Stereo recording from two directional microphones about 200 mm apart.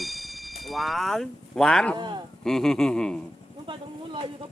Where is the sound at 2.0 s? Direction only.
20° right (ahead or behind).